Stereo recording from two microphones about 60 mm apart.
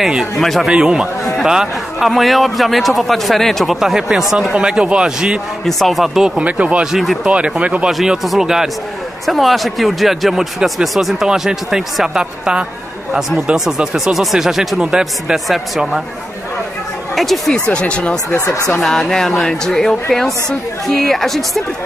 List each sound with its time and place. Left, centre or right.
0.0 s speech: centre
0.7 s speech: centre
3.8 s speech: centre
4.6 s speech: centre
5.7 s speech: centre
6.6 s speech: right
6.9 s speech: centre
7.2 s speech: centre
7.9 s speech: centre
15.3 s speech: centre
17.1 s speech: centre
17.5 s speech: centre
18.3 s speech: left
18.8 s speech: centre